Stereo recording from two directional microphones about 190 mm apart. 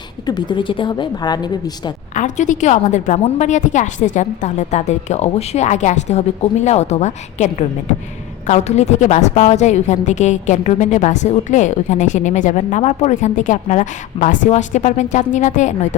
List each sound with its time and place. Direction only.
0.3 s a woman's voice: 25° left (ahead or behind)
2.1 s a woman's voice: 40° left (ahead or behind)